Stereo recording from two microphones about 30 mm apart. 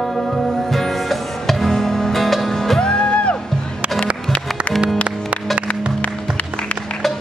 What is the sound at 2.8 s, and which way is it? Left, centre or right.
Music, left.